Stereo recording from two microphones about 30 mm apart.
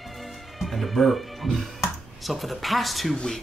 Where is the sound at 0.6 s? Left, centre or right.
Centre.